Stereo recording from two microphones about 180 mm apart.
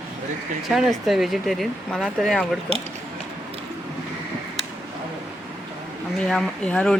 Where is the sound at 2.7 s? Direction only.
35° right (ahead or behind).